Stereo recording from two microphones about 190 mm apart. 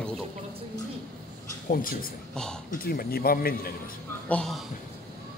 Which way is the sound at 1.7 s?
50° left (ahead or behind).